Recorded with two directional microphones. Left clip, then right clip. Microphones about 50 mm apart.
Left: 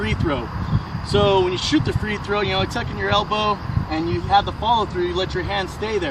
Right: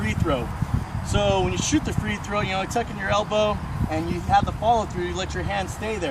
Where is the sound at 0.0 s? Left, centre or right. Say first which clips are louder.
Left 2 dB; right.